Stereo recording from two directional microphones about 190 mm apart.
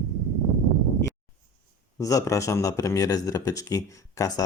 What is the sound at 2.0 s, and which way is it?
Speech, 15° left (ahead or behind).